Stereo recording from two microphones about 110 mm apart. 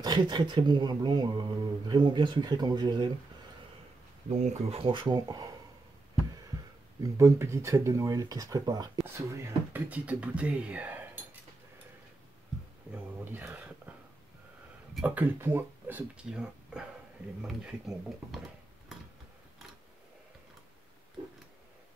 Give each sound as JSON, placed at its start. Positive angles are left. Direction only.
{"t": 0.0, "sound": "speech", "side_deg": -40}
{"t": 4.3, "sound": "speech", "side_deg": -90}
{"t": 4.9, "sound": "speech", "side_deg": -40}
{"t": 7.0, "sound": "speech", "side_deg": -25}
{"t": 9.0, "sound": "speech", "side_deg": -25}
{"t": 12.9, "sound": "speech", "side_deg": -15}
{"t": 15.0, "sound": "speech", "side_deg": -10}
{"t": 16.3, "sound": "speech", "side_deg": -5}